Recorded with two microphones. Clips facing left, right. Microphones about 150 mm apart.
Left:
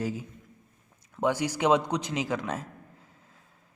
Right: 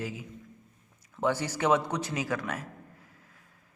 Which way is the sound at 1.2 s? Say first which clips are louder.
Left 2 dB; 15° left (ahead or behind).